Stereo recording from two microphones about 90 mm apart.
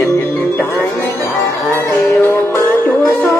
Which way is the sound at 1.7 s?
25° left (ahead or behind).